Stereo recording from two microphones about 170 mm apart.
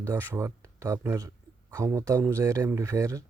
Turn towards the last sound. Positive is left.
turn(degrees=-20)  # may be behind; listen again after turning